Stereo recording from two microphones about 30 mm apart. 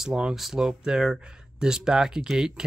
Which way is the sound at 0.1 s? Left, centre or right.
Right.